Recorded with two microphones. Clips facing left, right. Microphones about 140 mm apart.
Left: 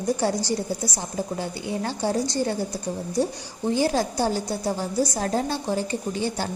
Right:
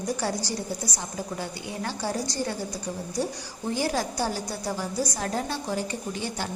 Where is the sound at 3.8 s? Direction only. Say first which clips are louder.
Left 4 dB; 25° left (ahead or behind).